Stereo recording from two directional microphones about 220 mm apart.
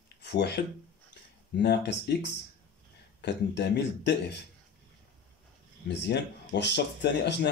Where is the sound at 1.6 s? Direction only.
50° left (ahead or behind).